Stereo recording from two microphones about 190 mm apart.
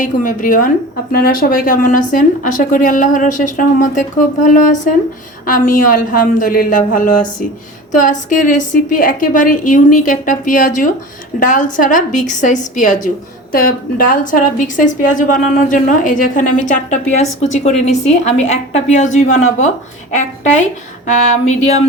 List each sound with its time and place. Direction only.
0.0 s a woman's voice: 45° left (ahead or behind)
21.1 s a woman's voice: 35° left (ahead or behind)